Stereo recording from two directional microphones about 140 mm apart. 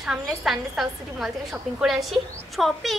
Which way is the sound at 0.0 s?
5° right (ahead or behind).